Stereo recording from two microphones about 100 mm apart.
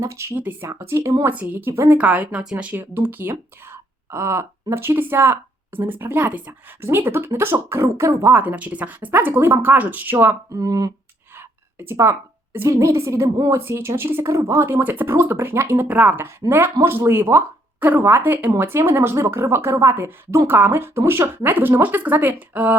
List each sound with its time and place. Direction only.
0.0 s a woman's voice: 30° right (ahead or behind)
1.2 s speech: 15° right (ahead or behind)
2.7 s speech: 20° right (ahead or behind)
8.4 s speech: 15° right (ahead or behind)
10.5 s a woman's voice: 35° right (ahead or behind)
11.3 s a sound: 25° right (ahead or behind)
12.5 s a woman's voice: 30° right (ahead or behind)
13.7 s speech: 25° right (ahead or behind)